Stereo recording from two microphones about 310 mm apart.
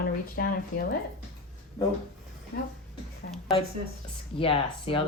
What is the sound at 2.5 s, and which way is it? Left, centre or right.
Speech, left.